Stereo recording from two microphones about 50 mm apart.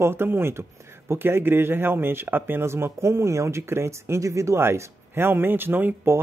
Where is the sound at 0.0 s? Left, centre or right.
Right.